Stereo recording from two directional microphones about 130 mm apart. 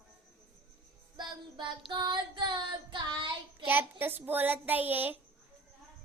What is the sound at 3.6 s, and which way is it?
A woman's voice, 15° right (ahead or behind).